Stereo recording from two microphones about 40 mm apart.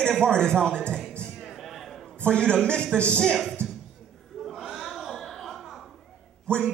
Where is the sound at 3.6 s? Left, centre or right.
Right.